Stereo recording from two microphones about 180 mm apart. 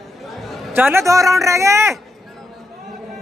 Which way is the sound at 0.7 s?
10° right (ahead or behind).